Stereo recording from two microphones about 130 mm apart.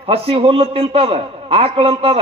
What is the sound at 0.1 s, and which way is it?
A man's voice, 45° right (ahead or behind).